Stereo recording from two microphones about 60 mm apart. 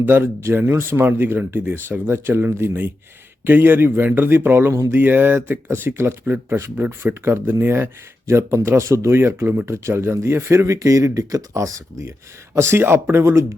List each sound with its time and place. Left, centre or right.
0.0 s speech: right
7.0 s speech: right
8.3 s speech: right
10.7 s speech: right
12.5 s speech: right